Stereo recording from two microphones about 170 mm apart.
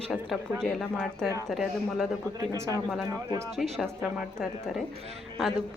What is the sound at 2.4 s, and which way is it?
Speech, 20° right (ahead or behind).